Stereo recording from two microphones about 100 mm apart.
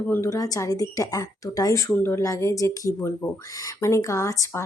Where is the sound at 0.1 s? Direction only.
30° left (ahead or behind).